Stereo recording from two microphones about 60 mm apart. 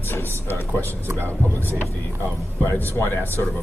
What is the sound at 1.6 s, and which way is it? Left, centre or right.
Speech, left.